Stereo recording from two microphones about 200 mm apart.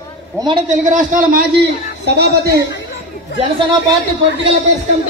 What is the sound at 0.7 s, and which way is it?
Speech, 40° right (ahead or behind).